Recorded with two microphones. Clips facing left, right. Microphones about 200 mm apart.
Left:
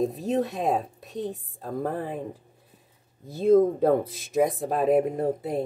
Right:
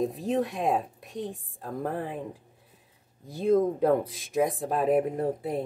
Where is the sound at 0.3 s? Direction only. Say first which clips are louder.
Even; 25° left (ahead or behind).